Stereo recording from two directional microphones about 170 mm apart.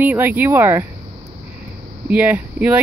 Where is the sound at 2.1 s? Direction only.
10° right (ahead or behind).